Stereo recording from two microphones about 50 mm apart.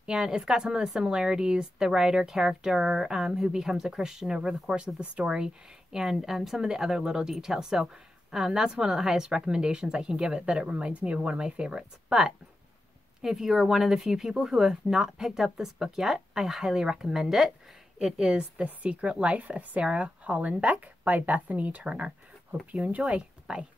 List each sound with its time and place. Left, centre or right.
0.0 s a woman's voice: centre
18.1 s a woman's voice: centre